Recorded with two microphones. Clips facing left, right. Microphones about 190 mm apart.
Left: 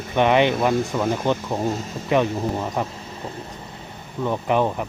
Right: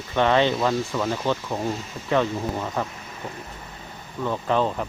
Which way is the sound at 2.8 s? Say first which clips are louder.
Left 3 dB; 25° left (ahead or behind).